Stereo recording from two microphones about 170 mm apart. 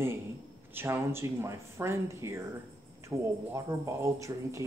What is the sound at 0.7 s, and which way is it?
Speech, 15° right (ahead or behind).